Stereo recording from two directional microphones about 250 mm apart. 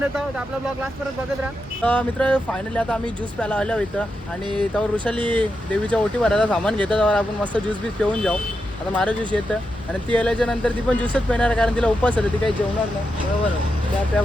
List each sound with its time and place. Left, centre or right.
1.8 s speech: centre
5.1 s speech: centre
5.4 s speech: centre